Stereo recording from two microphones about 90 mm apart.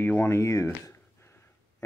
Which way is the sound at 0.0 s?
25° left (ahead or behind).